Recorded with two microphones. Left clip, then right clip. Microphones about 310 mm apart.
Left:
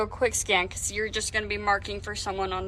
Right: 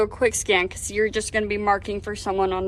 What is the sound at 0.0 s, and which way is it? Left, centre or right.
A woman's voice, right.